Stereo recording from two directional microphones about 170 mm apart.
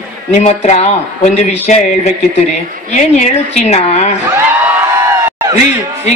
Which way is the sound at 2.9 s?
45° left (ahead or behind).